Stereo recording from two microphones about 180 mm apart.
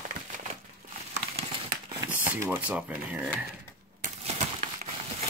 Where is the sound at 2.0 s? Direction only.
10° right (ahead or behind).